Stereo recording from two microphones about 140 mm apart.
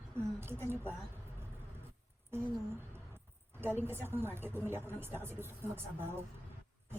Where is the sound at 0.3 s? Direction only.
15° right (ahead or behind).